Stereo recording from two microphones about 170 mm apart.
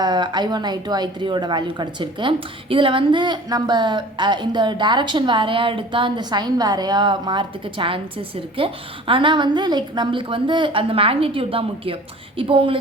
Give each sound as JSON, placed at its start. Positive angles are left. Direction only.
{"t": 0.0, "sound": "a woman's voice", "side_deg": -25}